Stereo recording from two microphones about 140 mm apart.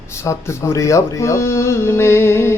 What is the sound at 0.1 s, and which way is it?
Speech, 20° left (ahead or behind).